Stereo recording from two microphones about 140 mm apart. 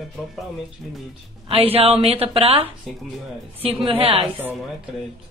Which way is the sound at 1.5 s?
45° right (ahead or behind).